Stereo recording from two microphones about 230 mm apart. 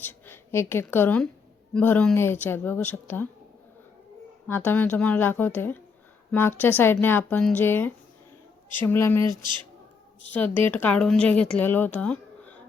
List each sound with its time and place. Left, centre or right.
0.0 s a woman's voice: centre
4.4 s a woman's voice: centre
9.3 s speech: centre
10.3 s speech: centre